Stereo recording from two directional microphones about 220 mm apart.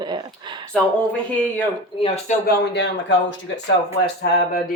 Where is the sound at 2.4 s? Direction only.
50° left (ahead or behind).